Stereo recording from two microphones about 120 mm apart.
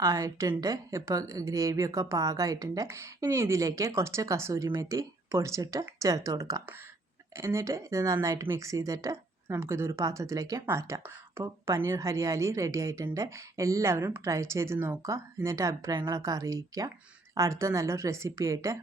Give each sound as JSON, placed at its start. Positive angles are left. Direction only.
{"t": 0.0, "sound": "a woman's voice", "side_deg": -35}